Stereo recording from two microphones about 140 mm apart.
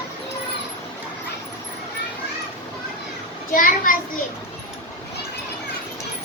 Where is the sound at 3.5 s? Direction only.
75° left (ahead or behind).